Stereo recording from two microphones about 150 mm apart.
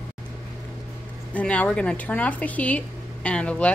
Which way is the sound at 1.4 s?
10° left (ahead or behind).